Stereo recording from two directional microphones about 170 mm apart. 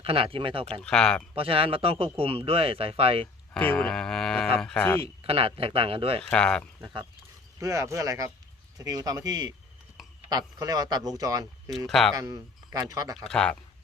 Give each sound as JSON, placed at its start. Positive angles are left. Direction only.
{"t": 0.0, "sound": "speech", "side_deg": -35}
{"t": 0.8, "sound": "speech", "side_deg": 5}
{"t": 1.4, "sound": "speech", "side_deg": -35}
{"t": 3.5, "sound": "speech", "side_deg": 5}
{"t": 5.0, "sound": "speech", "side_deg": -35}
{"t": 6.3, "sound": "speech", "side_deg": 5}
{"t": 7.6, "sound": "speech", "side_deg": -15}
{"t": 11.9, "sound": "speech", "side_deg": 0}
{"t": 12.1, "sound": "speech", "side_deg": -20}
{"t": 13.1, "sound": "speech", "side_deg": 5}